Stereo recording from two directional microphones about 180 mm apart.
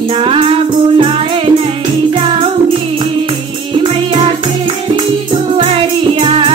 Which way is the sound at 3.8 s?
35° right (ahead or behind).